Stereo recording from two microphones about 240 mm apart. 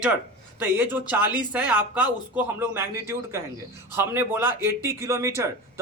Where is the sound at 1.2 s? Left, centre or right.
Centre.